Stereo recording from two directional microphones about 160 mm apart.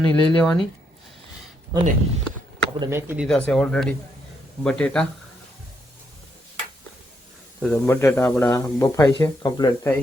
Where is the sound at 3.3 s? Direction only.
5° left (ahead or behind).